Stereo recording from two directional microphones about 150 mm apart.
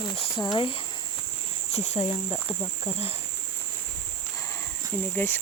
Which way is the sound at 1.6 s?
50° left (ahead or behind).